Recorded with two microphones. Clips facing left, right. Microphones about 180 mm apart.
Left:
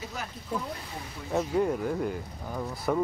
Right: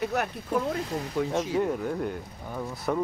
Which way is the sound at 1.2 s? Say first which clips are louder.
Right 14 dB; 75° right (ahead or behind).